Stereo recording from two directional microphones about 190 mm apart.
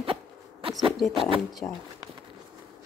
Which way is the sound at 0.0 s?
30° right (ahead or behind).